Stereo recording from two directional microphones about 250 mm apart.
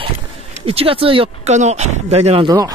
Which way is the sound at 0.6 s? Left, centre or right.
Right.